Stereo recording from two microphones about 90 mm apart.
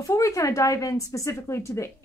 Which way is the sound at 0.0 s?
40° left (ahead or behind).